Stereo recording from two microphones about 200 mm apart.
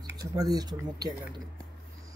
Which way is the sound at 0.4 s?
20° right (ahead or behind).